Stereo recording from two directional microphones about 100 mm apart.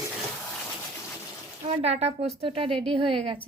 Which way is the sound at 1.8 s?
90° right.